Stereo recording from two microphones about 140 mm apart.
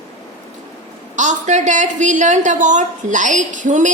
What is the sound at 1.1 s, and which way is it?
A woman's voice, 60° right (ahead or behind).